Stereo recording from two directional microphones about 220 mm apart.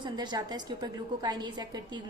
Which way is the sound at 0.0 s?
20° right (ahead or behind).